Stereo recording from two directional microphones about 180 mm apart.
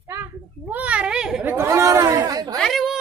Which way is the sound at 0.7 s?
5° right (ahead or behind).